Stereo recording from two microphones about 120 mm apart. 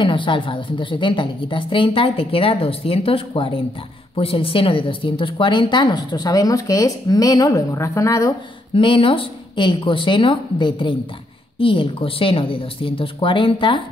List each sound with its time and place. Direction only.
0.0 s a woman's voice: 45° left (ahead or behind); by 8.3 s 25° left (ahead or behind)
8.7 s a woman's voice: 45° left (ahead or behind)